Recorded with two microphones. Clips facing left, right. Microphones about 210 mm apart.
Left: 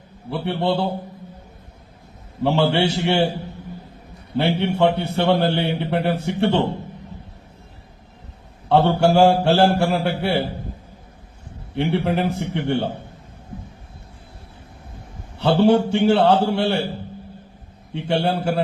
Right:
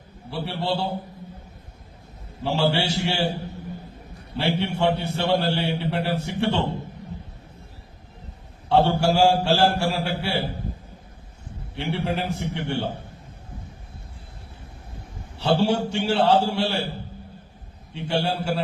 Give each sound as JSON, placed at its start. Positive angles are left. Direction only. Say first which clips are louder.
{"t": 0.3, "sound": "a man's voice", "louder": "left 5 dB", "side_deg": 55}
{"t": 2.4, "sound": "a man's voice", "louder": "left 5 dB", "side_deg": 60}
{"t": 4.4, "sound": "a man's voice", "louder": "left 5 dB", "side_deg": 60}
{"t": 8.7, "sound": "a man's voice", "louder": "left 4 dB", "side_deg": 55}
{"t": 11.7, "sound": "a man's voice", "louder": "left 6 dB", "side_deg": 55}
{"t": 15.4, "sound": "a man's voice", "louder": "left 6 dB", "side_deg": 55}
{"t": 17.9, "sound": "a man's voice", "louder": "left 4 dB", "side_deg": 60}